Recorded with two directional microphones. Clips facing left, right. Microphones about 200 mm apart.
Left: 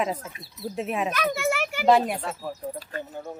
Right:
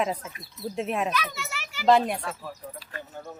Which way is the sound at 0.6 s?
Centre (ahead or behind).